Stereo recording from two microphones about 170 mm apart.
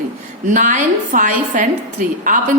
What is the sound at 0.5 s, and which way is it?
A woman's voice, 50° right (ahead or behind).